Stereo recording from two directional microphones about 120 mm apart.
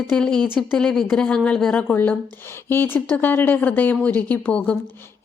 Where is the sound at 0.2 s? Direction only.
5° left (ahead or behind).